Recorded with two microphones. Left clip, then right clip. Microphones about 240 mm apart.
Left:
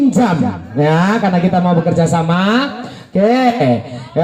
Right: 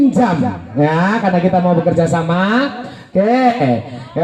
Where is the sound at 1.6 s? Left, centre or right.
Left.